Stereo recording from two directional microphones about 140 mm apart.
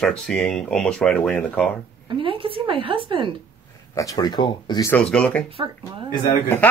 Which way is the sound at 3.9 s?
25° left (ahead or behind).